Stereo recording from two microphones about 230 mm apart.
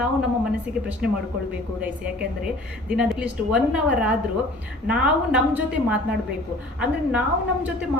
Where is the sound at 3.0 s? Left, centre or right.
Centre.